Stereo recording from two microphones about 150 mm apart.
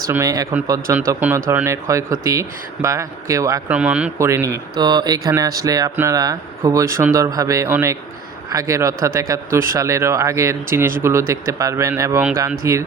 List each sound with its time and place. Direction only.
0.1 s speech: 20° right (ahead or behind)
3.7 s speech: 10° right (ahead or behind)
4.2 s speech: 20° right (ahead or behind)
4.7 s speech: 30° right (ahead or behind)